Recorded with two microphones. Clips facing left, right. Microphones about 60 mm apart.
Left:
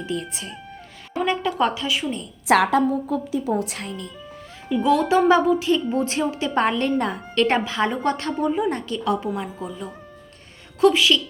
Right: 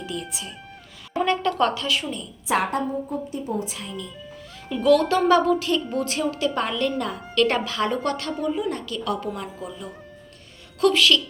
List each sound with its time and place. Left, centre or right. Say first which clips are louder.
0.0 s speech: left 3 dB; left
1.2 s speech: even; centre
2.5 s a woman's voice: left 6 dB; left
3.1 s a woman's voice: left 5 dB; left
3.8 s speech: left 1 dB; left
4.8 s a woman's voice: even; centre
6.5 s a woman's voice: left 4 dB; left; by 11.2 s centre